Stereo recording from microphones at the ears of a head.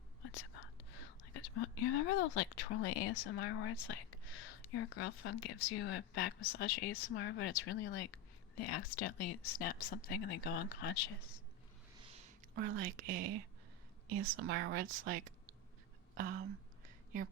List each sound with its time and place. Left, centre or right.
0.2 s speech: left
12.0 s a woman's voice: right
16.1 s a sound: right